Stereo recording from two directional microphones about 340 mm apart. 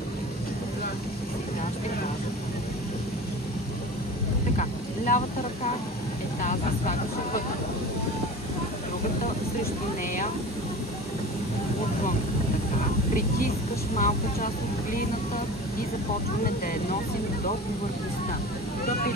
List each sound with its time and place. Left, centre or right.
4.6 s vehicle: left
6.4 s speech: left
13.9 s speech: left